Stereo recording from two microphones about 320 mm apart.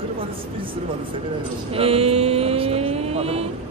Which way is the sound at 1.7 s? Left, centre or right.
Centre.